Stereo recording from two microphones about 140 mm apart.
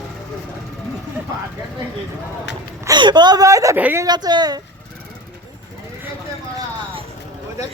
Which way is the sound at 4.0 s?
30° right (ahead or behind).